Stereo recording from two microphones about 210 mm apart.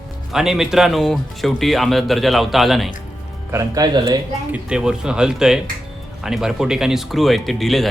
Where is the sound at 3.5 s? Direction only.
15° right (ahead or behind).